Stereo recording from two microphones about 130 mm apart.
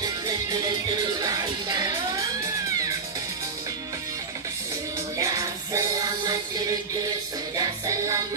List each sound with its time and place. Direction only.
0.0 s music: 30° right (ahead or behind)
5.1 s music: 25° right (ahead or behind)
7.5 s music: 25° right (ahead or behind)